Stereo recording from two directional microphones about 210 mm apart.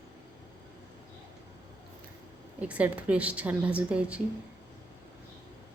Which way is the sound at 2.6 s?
5° right (ahead or behind).